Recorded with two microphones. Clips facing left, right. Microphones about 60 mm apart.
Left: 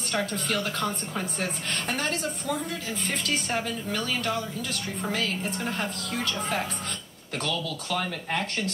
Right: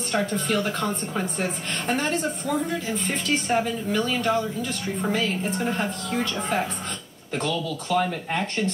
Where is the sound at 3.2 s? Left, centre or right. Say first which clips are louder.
Right 7 dB; right.